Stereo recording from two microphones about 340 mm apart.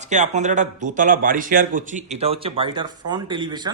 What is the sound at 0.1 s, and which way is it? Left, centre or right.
A man's voice, right.